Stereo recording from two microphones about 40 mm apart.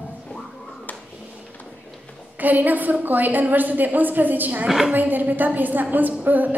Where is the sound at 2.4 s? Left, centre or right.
Right.